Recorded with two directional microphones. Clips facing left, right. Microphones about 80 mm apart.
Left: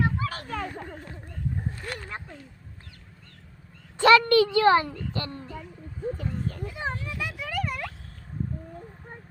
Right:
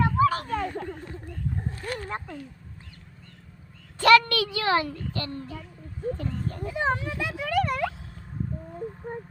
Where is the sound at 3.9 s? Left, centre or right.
Left.